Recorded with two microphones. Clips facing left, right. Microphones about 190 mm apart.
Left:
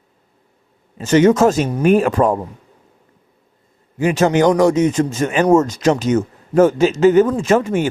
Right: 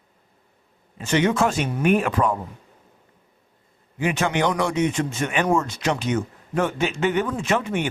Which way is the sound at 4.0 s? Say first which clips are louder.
Left 8 dB; 40° left (ahead or behind).